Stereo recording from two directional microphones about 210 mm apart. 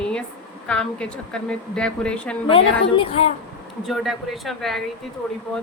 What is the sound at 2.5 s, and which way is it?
Speech, 25° left (ahead or behind).